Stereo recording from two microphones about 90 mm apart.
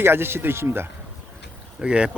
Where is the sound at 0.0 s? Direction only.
25° right (ahead or behind).